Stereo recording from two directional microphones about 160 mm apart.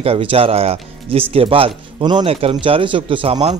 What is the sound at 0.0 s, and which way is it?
Speech, 35° right (ahead or behind).